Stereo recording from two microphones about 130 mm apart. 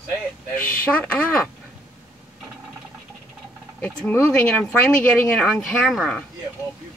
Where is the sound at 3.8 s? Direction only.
10° left (ahead or behind).